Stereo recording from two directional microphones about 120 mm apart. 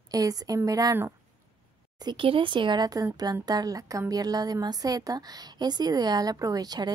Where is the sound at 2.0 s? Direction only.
45° right (ahead or behind).